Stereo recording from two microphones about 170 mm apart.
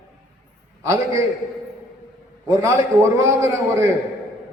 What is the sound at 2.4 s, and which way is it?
A man's voice, 15° right (ahead or behind).